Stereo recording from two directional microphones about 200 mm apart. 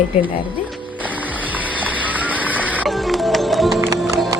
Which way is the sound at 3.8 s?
15° right (ahead or behind).